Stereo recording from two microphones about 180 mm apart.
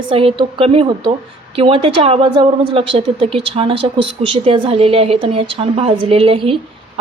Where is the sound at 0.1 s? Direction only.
30° right (ahead or behind).